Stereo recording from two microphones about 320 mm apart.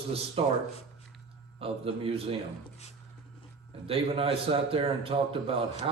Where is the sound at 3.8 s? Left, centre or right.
Centre.